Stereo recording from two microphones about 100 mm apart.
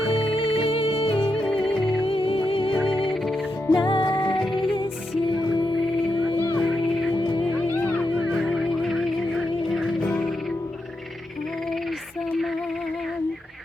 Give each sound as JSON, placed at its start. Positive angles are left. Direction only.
{"t": 0.1, "sound": "music", "side_deg": 70}
{"t": 4.4, "sound": "music", "side_deg": 0}
{"t": 6.3, "sound": "music", "side_deg": 25}
{"t": 6.6, "sound": "music", "side_deg": 0}
{"t": 7.2, "sound": "music", "side_deg": 55}
{"t": 7.7, "sound": "a sound", "side_deg": 15}
{"t": 8.2, "sound": "music", "side_deg": 0}